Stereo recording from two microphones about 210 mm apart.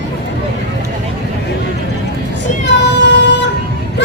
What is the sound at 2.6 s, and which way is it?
Child singing, 55° left (ahead or behind).